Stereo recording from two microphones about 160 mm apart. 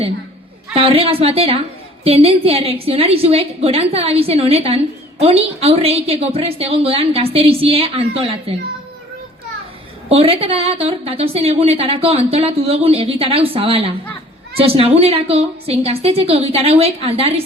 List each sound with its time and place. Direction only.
0.7 s a woman's voice: 35° right (ahead or behind)
10.1 s a woman's voice: 35° right (ahead or behind)